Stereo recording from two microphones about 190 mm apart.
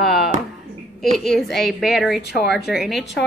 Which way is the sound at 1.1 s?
Centre (ahead or behind).